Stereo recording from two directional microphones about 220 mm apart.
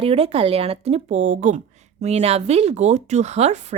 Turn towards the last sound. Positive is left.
turn(degrees=-30)  # may be behind; listen again after turning